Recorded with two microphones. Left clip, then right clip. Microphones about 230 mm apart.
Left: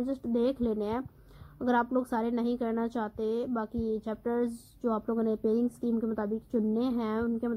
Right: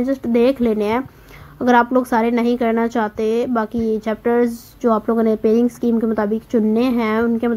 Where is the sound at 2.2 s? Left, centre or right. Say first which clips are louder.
Right 14 dB; right.